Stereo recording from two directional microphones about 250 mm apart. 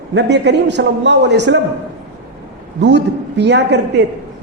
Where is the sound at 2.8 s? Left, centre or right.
Right.